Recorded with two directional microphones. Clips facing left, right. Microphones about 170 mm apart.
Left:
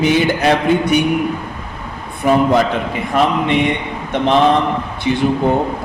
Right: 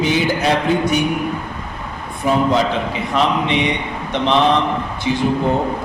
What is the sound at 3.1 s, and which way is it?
Speech, 50° left (ahead or behind).